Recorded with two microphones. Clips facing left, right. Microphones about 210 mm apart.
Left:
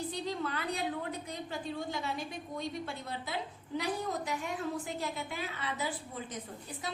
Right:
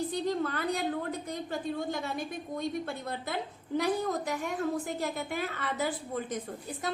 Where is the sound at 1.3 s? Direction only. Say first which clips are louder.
Right 5 dB; 50° right (ahead or behind).